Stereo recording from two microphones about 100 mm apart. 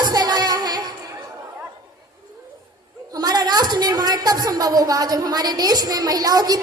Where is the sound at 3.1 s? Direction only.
45° right (ahead or behind).